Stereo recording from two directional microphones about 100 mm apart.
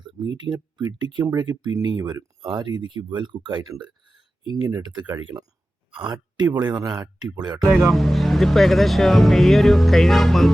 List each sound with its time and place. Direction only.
0.0 s a sound: 50° right (ahead or behind)
1.2 s speech: 40° right (ahead or behind)
7.7 s speech: centre (ahead or behind)